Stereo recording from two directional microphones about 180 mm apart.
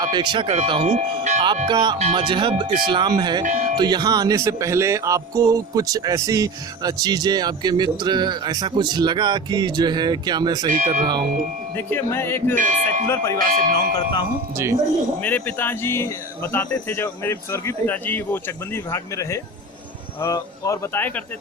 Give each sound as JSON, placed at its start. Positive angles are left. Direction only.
{"t": 0.0, "sound": "speech", "side_deg": -25}
{"t": 1.6, "sound": "speech", "side_deg": -25}
{"t": 3.4, "sound": "speech", "side_deg": -45}
{"t": 3.8, "sound": "speech", "side_deg": -25}
{"t": 10.7, "sound": "speech", "side_deg": -45}
{"t": 11.8, "sound": "speech", "side_deg": 10}
{"t": 12.5, "sound": "speech", "side_deg": -45}
{"t": 13.1, "sound": "speech", "side_deg": 15}
{"t": 13.4, "sound": "speech", "side_deg": -50}
{"t": 13.9, "sound": "speech", "side_deg": 25}
{"t": 15.2, "sound": "speech", "side_deg": 10}